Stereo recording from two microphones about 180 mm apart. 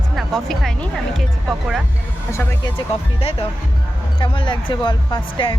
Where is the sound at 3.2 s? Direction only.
30° left (ahead or behind).